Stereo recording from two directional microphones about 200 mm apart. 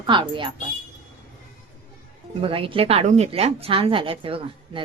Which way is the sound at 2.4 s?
25° right (ahead or behind).